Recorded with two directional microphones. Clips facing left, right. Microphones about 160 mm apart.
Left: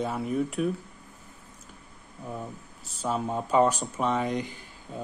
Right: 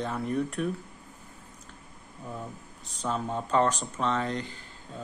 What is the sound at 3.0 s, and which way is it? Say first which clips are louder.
Speech: left 2 dB; 10° left (ahead or behind).